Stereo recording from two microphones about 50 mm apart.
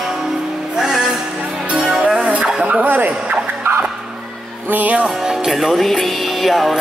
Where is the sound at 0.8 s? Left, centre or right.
Centre.